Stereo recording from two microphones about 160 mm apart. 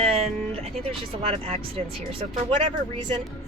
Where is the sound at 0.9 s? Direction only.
35° right (ahead or behind).